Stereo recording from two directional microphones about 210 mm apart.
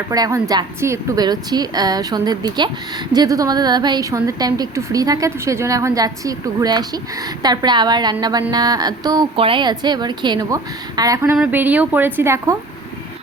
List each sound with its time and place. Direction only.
0.1 s a woman's voice: 15° right (ahead or behind)